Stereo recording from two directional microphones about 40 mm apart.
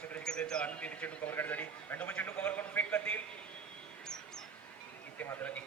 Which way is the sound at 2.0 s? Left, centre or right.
Left.